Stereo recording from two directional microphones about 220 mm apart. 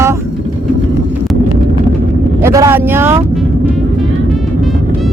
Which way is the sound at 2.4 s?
15° right (ahead or behind).